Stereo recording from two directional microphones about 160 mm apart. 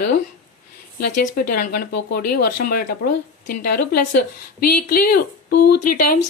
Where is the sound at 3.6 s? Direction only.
70° left (ahead or behind).